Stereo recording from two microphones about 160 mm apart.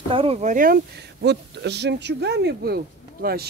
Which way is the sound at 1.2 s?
90° right.